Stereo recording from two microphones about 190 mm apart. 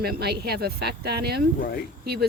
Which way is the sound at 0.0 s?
55° right (ahead or behind).